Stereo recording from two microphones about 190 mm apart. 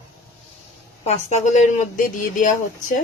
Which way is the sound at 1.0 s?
35° left (ahead or behind).